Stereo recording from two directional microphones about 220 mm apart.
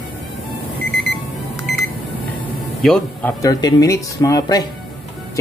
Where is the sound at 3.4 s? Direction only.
15° left (ahead or behind).